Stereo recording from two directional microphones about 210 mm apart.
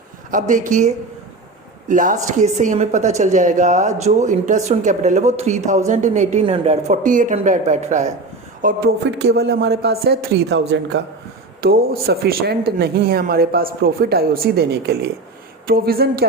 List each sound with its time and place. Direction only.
0.3 s a woman's voice: 40° right (ahead or behind)
8.6 s speech: 50° right (ahead or behind)